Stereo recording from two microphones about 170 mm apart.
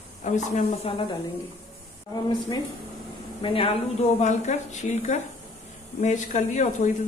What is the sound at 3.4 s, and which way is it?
Speech, 30° left (ahead or behind).